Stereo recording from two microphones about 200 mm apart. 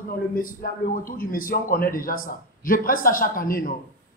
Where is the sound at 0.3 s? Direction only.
45° left (ahead or behind).